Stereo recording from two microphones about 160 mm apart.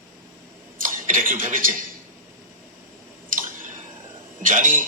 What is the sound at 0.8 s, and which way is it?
Speech, 55° right (ahead or behind).